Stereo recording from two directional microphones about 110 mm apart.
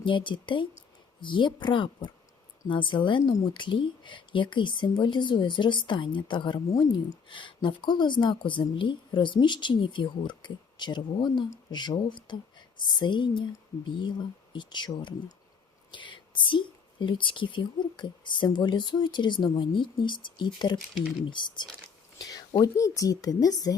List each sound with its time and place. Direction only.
0.0 s speech: 50° left (ahead or behind)
22.2 s a sound: 35° left (ahead or behind)
22.6 s speech: 30° left (ahead or behind)